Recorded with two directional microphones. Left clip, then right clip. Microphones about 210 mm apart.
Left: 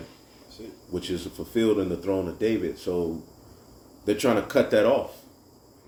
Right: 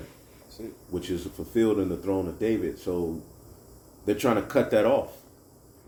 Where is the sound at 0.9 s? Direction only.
Centre (ahead or behind).